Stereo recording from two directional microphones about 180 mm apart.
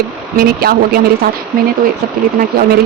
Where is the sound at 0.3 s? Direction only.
55° right (ahead or behind).